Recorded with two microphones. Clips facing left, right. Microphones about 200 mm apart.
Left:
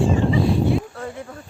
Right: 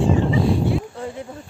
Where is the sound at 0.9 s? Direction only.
20° right (ahead or behind).